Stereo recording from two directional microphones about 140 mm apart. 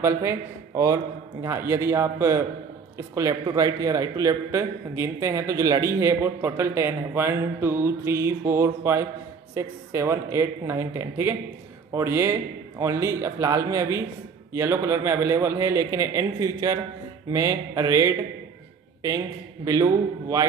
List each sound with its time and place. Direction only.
0.0 s a man's voice: 20° right (ahead or behind)